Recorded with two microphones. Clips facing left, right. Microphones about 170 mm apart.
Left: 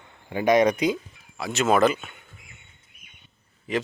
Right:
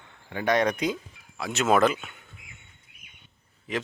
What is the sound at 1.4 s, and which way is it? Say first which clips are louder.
Speech: left 2 dB; centre (ahead or behind).